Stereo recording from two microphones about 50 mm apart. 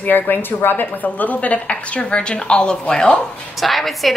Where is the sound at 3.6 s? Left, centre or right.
Centre.